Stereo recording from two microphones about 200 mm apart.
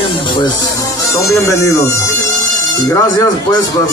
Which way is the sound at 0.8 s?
15° left (ahead or behind).